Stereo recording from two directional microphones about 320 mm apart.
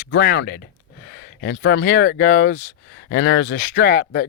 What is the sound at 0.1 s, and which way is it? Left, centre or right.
Speech, left.